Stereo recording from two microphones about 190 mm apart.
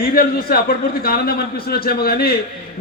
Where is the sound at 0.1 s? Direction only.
55° left (ahead or behind).